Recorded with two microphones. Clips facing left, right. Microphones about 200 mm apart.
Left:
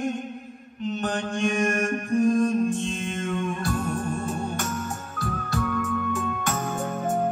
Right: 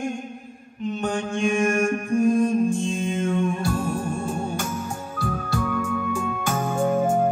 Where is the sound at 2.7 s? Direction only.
Centre (ahead or behind).